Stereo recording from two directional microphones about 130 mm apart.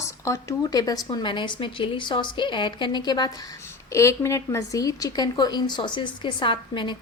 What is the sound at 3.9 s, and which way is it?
A woman's voice, 20° left (ahead or behind).